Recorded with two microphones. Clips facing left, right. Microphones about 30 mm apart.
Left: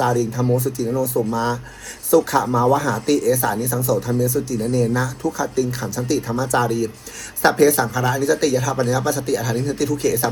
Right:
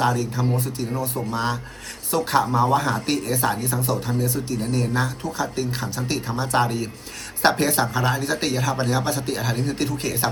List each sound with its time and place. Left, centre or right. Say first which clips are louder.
0.0 s speech: left 3 dB; right